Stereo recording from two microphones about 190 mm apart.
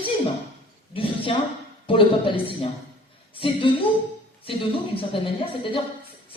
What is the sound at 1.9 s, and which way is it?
A woman's voice, 30° left (ahead or behind).